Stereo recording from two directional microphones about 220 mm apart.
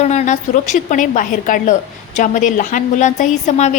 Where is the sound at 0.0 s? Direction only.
30° left (ahead or behind).